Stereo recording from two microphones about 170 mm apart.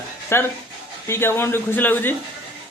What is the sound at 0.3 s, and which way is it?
A man's voice, 15° left (ahead or behind).